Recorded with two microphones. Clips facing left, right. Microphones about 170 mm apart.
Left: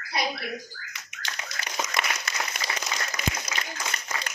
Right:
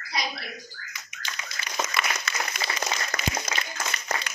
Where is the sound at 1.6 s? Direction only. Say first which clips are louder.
Left 2 dB; 55° left (ahead or behind).